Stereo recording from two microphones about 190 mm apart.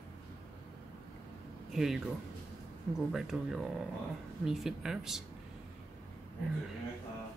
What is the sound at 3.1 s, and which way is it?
Speech, centre (ahead or behind).